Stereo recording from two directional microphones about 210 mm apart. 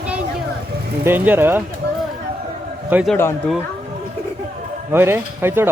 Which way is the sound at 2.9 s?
5° right (ahead or behind).